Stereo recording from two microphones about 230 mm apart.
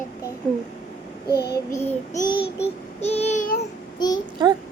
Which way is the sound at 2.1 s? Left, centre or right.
Left.